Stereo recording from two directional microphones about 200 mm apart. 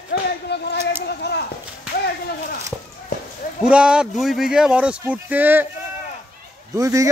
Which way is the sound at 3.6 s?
5° right (ahead or behind).